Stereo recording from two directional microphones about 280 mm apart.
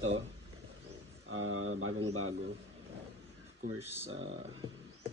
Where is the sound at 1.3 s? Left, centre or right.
Right.